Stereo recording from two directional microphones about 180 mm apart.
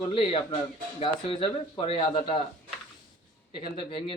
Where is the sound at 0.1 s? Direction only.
30° left (ahead or behind).